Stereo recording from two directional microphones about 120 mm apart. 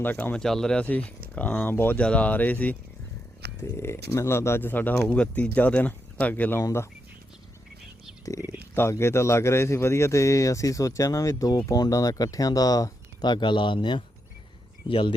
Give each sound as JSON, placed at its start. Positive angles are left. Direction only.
{"t": 0.0, "sound": "speech", "side_deg": 15}
{"t": 6.6, "sound": "speech", "side_deg": 30}
{"t": 8.2, "sound": "speech", "side_deg": 25}